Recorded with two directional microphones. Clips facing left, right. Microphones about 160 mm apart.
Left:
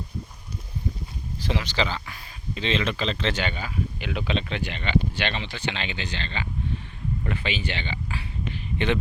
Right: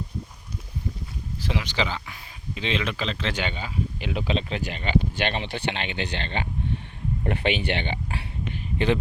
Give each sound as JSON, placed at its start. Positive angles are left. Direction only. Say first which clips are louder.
{"t": 1.4, "sound": "speech", "louder": "left 1 dB", "side_deg": -10}
{"t": 4.0, "sound": "speech", "louder": "right 1 dB", "side_deg": -35}
{"t": 5.1, "sound": "speech", "louder": "right 2 dB", "side_deg": -50}
{"t": 8.8, "sound": "speech", "louder": "right 2 dB", "side_deg": -35}